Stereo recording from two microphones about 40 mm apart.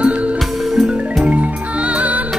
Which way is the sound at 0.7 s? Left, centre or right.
Centre.